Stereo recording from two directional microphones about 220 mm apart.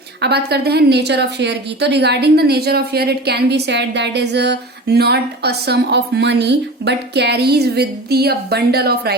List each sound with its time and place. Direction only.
0.2 s a woman's voice: 45° right (ahead or behind)